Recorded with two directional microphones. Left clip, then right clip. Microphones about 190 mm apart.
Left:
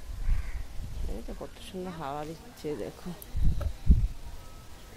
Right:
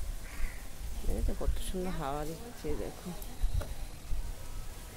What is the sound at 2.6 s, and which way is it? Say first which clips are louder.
Speech: left 4 dB; 50° left (ahead or behind).